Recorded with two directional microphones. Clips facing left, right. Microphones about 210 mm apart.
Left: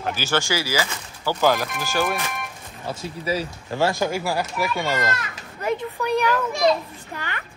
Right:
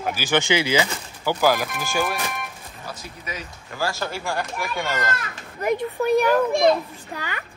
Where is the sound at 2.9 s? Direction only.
30° left (ahead or behind).